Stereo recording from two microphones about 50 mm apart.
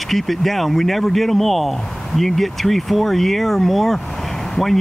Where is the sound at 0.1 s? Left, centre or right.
Centre.